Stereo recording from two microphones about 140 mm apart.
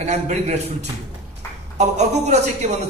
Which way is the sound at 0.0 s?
55° right (ahead or behind).